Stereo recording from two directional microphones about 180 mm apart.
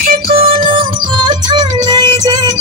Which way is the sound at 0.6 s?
25° right (ahead or behind).